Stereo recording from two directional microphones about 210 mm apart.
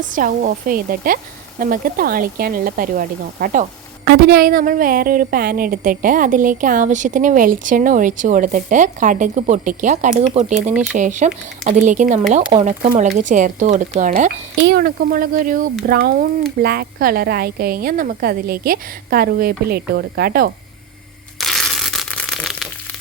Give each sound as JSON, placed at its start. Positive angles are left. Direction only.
{"t": 0.0, "sound": "a woman's voice", "side_deg": -40}
{"t": 14.6, "sound": "a woman's voice", "side_deg": -45}
{"t": 21.3, "sound": "crushing", "side_deg": 0}